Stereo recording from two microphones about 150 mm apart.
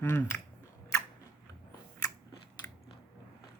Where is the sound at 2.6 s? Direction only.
15° left (ahead or behind).